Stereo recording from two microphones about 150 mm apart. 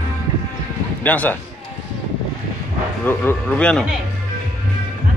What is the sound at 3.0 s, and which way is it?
Speech, 15° left (ahead or behind).